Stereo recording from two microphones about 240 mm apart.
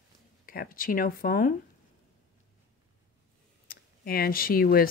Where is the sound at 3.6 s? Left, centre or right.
Left.